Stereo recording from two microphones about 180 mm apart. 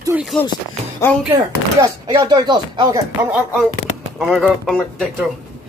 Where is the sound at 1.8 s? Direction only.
25° right (ahead or behind).